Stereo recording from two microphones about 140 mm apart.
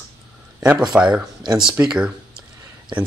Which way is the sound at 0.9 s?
5° right (ahead or behind).